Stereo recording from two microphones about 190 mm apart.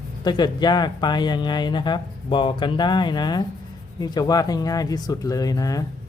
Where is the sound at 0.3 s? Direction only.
20° left (ahead or behind).